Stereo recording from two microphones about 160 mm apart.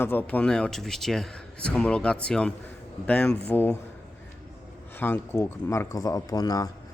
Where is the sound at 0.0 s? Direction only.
10° left (ahead or behind).